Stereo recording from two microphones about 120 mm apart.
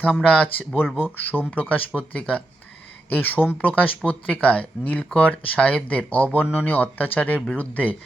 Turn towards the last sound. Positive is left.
turn(degrees=15)  # may be behind; listen again after turning